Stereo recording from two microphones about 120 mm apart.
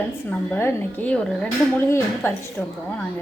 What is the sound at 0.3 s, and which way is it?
A woman's voice, 15° left (ahead or behind).